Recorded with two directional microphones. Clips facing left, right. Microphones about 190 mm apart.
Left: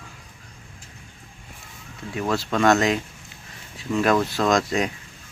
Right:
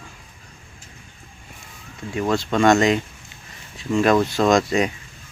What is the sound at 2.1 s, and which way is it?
Speech, 5° left (ahead or behind).